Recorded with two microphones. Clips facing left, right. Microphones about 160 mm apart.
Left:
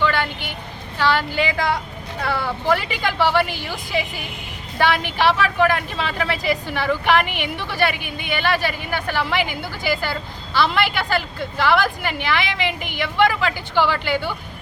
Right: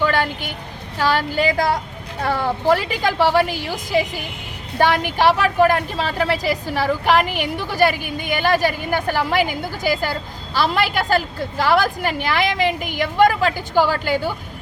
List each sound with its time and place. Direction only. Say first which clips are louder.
0.0 s vehicle: right 2 dB; 40° right (ahead or behind)
0.9 s a woman's voice: right 1 dB; 40° right (ahead or behind)
4.8 s a woman's voice: right 2 dB; 45° right (ahead or behind)